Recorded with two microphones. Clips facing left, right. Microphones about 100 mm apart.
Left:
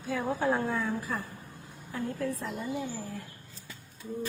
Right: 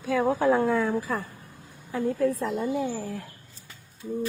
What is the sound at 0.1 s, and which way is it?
A woman's voice, 90° right.